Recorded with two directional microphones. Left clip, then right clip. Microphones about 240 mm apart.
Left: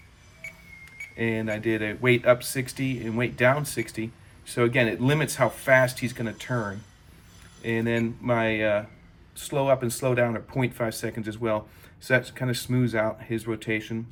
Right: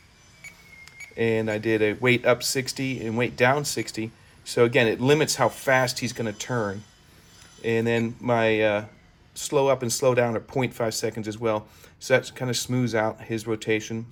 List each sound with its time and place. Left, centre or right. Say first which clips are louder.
1.1 s speech: right 4 dB; centre
7.6 s speech: right 3 dB; centre